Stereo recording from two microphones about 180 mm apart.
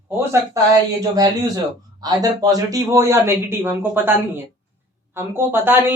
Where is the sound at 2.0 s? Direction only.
20° right (ahead or behind).